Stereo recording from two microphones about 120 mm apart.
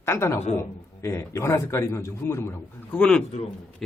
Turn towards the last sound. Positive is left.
turn(degrees=5)  # may be behind; listen again after turning